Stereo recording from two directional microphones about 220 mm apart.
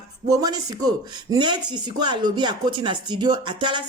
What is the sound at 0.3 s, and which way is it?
Speech, 15° right (ahead or behind).